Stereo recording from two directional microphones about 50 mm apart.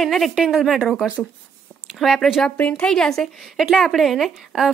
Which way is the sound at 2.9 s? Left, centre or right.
Centre.